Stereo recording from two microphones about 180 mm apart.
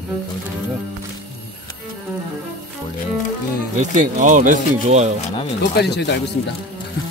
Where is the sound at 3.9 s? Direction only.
45° right (ahead or behind).